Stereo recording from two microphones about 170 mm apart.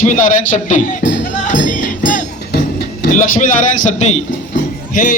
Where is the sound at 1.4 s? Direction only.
50° left (ahead or behind).